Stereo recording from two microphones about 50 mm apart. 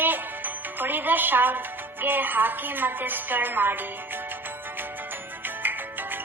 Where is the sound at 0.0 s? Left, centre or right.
Right.